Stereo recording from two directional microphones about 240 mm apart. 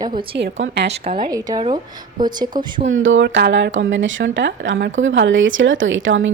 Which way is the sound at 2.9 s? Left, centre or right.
Right.